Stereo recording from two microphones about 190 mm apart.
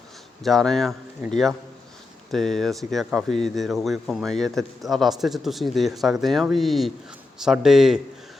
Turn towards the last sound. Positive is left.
turn(degrees=0)  # may be behind; listen again after turning